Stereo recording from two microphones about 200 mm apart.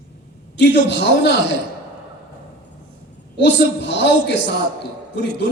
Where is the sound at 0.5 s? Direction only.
60° left (ahead or behind).